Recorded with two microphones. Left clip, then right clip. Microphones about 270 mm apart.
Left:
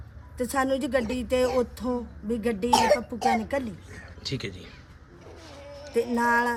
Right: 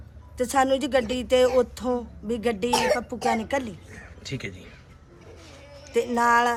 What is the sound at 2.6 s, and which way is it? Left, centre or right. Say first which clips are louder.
Speech: left 3 dB; left.